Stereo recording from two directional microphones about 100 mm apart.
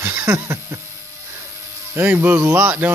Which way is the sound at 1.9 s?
20° right (ahead or behind).